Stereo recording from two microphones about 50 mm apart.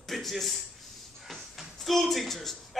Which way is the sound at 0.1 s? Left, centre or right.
Centre.